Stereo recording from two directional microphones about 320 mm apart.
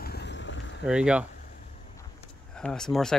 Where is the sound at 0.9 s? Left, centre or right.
Centre.